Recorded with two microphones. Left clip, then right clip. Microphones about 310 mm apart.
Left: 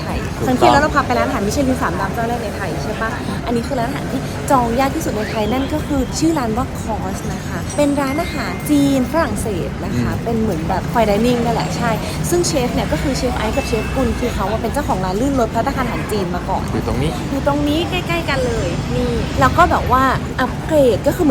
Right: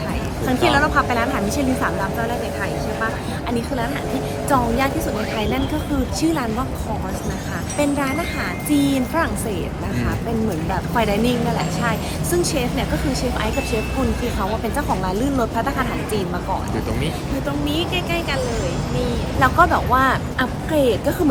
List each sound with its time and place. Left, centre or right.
0.4 s a woman's voice: centre
4.4 s a woman's voice: centre
6.2 s a woman's voice: centre
7.8 s a woman's voice: centre
10.9 s a woman's voice: centre
14.8 s a woman's voice: centre
17.7 s a woman's voice: centre
19.4 s a woman's voice: centre